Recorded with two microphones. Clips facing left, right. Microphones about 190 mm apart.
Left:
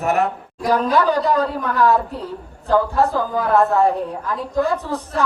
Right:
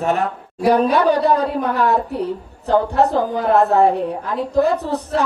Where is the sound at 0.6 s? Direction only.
65° right (ahead or behind).